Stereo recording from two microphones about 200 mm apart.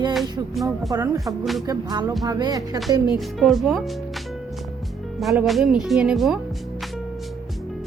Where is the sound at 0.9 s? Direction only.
15° right (ahead or behind).